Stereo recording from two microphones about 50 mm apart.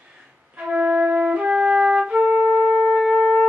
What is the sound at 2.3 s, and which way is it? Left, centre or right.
Music, right.